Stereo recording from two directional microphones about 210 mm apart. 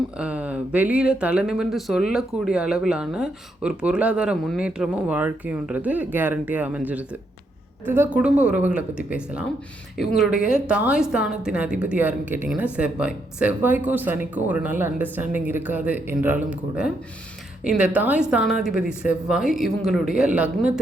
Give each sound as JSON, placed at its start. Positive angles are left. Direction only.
{"t": 0.2, "sound": "speech", "side_deg": -5}